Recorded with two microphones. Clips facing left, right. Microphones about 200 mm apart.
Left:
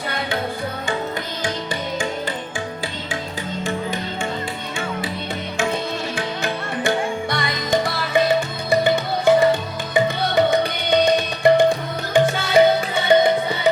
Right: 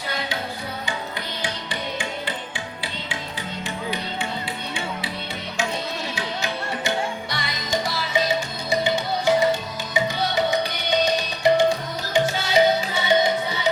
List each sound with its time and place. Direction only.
1.4 s music: 45° left (ahead or behind)
6.1 s music: 55° left (ahead or behind)